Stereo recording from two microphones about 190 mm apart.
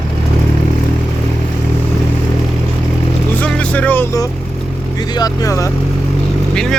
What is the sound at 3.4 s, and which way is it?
Vehicle, 5° left (ahead or behind).